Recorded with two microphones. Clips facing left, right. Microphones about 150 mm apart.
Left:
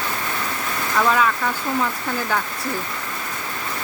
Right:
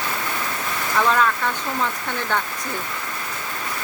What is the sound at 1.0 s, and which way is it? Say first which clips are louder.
Speech: left 1 dB; 5° left (ahead or behind).